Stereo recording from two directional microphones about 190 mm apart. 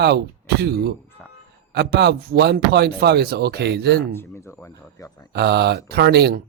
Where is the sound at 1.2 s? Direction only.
5° left (ahead or behind).